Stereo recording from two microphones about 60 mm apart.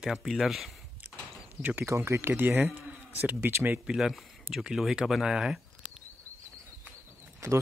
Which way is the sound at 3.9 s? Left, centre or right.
Centre.